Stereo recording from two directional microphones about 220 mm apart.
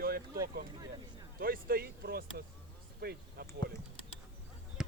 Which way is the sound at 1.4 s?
40° right (ahead or behind).